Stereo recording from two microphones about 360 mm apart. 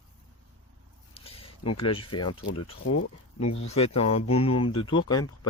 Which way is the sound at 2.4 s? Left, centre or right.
Left.